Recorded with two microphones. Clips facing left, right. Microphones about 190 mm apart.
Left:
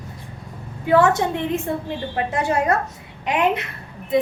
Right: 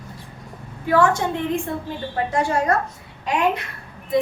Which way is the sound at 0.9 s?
20° left (ahead or behind).